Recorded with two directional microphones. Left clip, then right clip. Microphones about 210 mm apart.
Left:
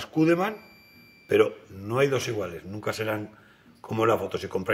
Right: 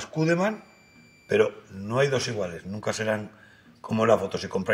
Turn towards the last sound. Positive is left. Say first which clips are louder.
# right 1 dB
turn(degrees=20)  # may be behind; listen again after turning